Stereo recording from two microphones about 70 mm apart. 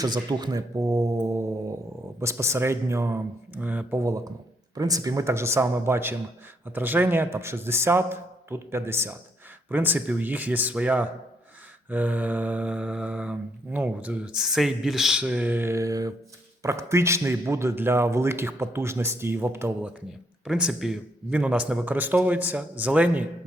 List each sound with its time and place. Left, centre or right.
0.0 s speech: right
0.8 s mantra: right
2.2 s speech: right
3.6 s mantra: right
3.9 s speech: right
9.6 s mantra: right
14.3 s speech: centre
15.2 s speech: centre
15.5 s mantra: right
16.6 s speech: right
20.4 s speech: centre
21.2 s speech: centre
21.8 s mantra: right